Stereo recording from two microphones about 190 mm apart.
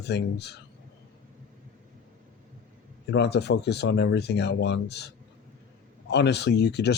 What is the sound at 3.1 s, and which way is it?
Speech, 60° left (ahead or behind).